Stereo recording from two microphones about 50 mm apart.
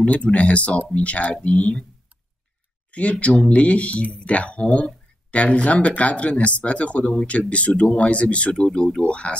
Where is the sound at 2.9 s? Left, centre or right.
Left.